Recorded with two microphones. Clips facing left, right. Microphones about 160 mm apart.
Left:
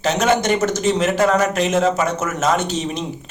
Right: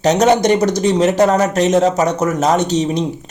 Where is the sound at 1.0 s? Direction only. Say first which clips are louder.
Right 4 dB; 40° right (ahead or behind).